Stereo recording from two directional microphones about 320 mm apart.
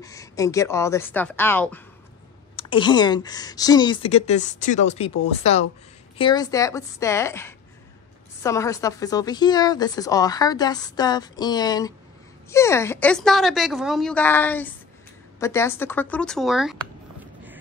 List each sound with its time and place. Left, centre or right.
0.0 s a woman's voice: centre